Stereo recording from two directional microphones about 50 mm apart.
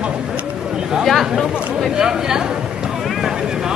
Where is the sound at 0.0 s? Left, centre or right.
Centre.